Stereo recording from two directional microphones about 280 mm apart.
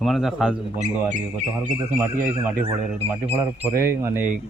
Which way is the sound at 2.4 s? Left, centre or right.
Centre.